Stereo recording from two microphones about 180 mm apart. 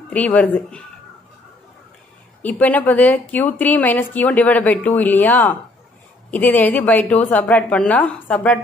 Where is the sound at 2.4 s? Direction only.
10° left (ahead or behind).